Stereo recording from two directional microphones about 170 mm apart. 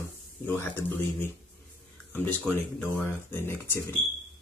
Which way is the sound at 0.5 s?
15° left (ahead or behind).